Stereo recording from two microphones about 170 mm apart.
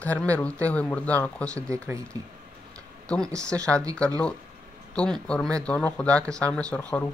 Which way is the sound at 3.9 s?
5° left (ahead or behind).